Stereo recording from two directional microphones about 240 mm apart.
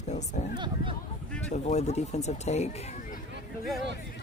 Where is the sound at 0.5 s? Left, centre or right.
Centre.